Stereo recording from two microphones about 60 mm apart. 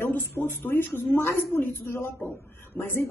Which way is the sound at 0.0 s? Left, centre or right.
Left.